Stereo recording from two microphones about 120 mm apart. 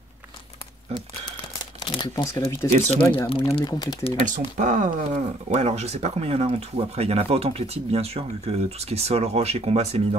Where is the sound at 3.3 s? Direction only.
50° left (ahead or behind).